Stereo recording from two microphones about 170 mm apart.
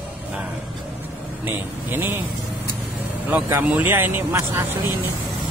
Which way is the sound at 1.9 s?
15° right (ahead or behind).